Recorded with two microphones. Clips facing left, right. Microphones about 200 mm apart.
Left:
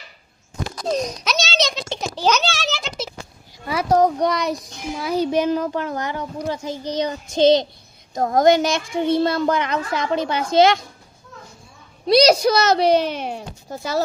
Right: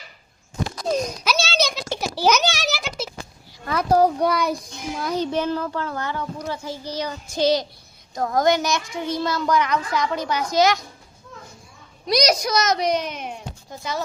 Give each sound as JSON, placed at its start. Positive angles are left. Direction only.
{"t": 0.9, "sound": "a sound", "side_deg": -5}
{"t": 3.9, "sound": "a child's voice", "side_deg": -5}
{"t": 12.0, "sound": "a woman's voice", "side_deg": 30}